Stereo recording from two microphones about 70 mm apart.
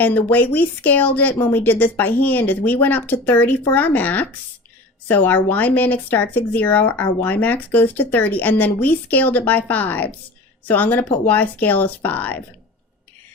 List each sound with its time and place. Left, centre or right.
0.0 s speech: left